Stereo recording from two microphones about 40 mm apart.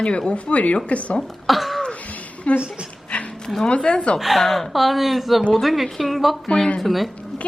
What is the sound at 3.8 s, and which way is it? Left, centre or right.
Speech, left.